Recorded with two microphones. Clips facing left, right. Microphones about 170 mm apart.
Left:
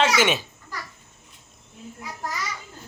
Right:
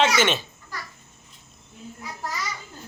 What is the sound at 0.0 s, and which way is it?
Speech, 10° left (ahead or behind).